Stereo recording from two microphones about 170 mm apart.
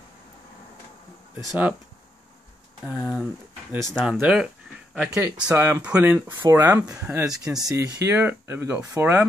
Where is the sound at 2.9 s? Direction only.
5° right (ahead or behind).